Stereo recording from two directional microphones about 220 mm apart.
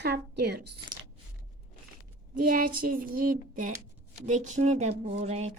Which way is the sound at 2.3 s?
40° right (ahead or behind).